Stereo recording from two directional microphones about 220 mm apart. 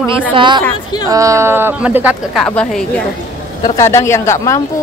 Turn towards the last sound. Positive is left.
turn(degrees=15)  # may be behind; listen again after turning